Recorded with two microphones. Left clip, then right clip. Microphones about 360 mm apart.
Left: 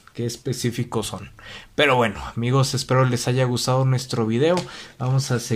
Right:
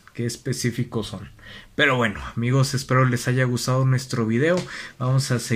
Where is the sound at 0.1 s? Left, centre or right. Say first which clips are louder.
Left 1 dB; centre.